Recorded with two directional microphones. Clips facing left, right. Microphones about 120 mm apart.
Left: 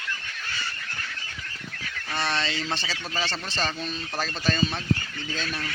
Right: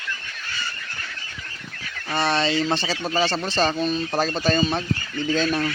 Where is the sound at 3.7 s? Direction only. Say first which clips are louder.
Right 10 dB; 55° right (ahead or behind).